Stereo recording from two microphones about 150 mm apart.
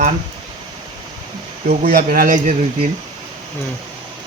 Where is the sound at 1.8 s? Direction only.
70° right (ahead or behind).